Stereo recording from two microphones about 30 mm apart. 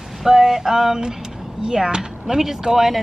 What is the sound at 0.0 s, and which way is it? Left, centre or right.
Speech, centre.